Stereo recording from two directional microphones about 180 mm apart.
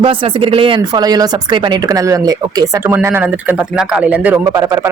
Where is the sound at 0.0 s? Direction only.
30° right (ahead or behind); by 4.4 s 5° right (ahead or behind).